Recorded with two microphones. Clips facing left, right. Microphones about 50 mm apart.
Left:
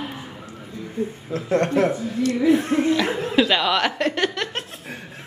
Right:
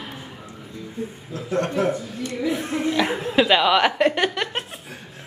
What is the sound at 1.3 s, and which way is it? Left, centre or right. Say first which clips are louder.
Speech: left 4 dB; left.